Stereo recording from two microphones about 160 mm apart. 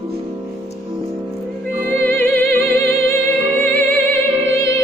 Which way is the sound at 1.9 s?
15° left (ahead or behind).